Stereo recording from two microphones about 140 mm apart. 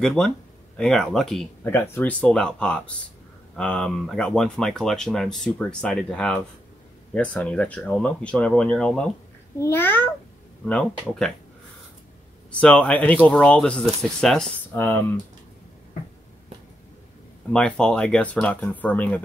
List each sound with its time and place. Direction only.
0.0 s speech: 5° left (ahead or behind)
1.6 s speech: 15° left (ahead or behind)
9.6 s speech: 15° left (ahead or behind)
12.4 s speech: 10° left (ahead or behind)
14.7 s speech: 15° left (ahead or behind)
17.5 s speech: 5° left (ahead or behind)